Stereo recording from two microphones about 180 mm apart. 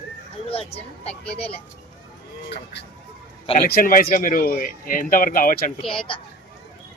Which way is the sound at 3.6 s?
55° left (ahead or behind).